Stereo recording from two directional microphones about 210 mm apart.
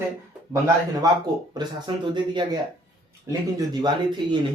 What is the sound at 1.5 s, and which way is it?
Speech, 20° right (ahead or behind).